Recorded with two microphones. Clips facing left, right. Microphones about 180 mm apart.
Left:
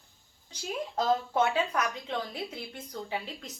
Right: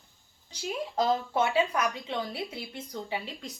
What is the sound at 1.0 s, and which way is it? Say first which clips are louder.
A woman's voice: even; 5° right (ahead or behind).